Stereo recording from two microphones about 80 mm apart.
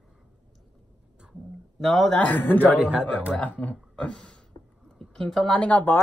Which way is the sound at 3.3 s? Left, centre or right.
Centre.